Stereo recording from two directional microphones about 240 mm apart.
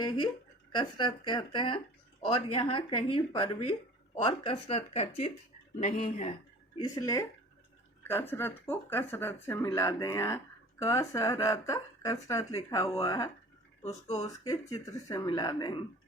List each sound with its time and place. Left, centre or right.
0.0 s speech: centre
6.7 s speech: centre
13.8 s speech: left
14.3 s speech: centre